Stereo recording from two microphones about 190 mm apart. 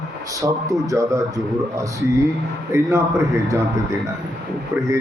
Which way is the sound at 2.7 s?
15° right (ahead or behind).